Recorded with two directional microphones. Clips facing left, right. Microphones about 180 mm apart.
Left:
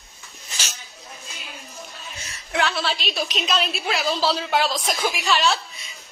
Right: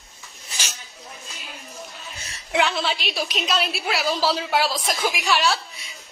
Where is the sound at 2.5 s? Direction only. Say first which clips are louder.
Right 1 dB; 15° right (ahead or behind).